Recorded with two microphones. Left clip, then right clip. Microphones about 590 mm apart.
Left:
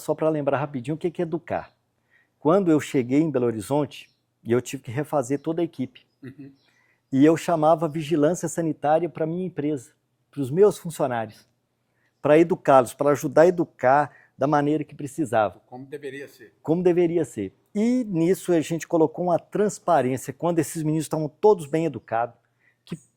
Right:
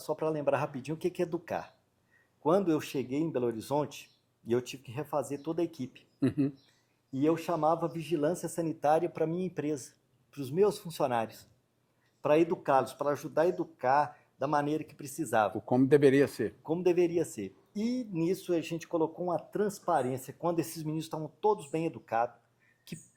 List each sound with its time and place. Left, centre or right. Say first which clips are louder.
0.0 s speech: left 8 dB; left
6.1 s speech: right 17 dB; right
7.1 s speech: left 11 dB; left
12.2 s speech: left 9 dB; left
15.7 s speech: right 12 dB; right
16.6 s speech: left 8 dB; left